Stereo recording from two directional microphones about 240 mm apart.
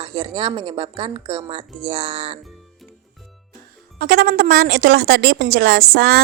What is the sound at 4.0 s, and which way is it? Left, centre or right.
Speech, right.